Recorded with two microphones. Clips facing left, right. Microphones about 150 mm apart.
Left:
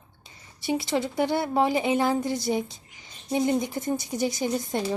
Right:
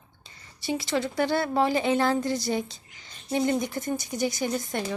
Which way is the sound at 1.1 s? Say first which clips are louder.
Even; 20° left (ahead or behind).